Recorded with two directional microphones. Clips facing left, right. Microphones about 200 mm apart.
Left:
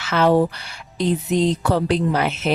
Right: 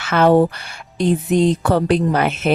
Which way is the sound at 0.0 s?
55° right (ahead or behind).